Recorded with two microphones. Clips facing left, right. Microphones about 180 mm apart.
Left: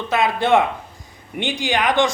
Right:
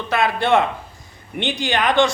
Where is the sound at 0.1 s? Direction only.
15° left (ahead or behind).